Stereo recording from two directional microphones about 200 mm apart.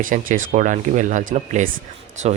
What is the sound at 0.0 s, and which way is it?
Speech, 40° right (ahead or behind).